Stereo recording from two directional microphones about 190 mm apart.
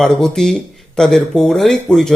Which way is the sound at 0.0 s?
Centre (ahead or behind).